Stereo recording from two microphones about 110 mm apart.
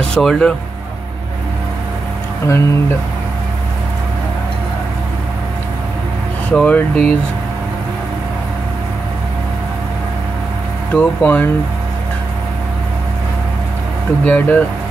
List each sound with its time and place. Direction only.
0.1 s speech: 5° left (ahead or behind)
2.4 s speech: 25° left (ahead or behind)
6.5 s speech: 10° left (ahead or behind)
11.0 s speech: 15° left (ahead or behind)
14.2 s speech: 15° left (ahead or behind)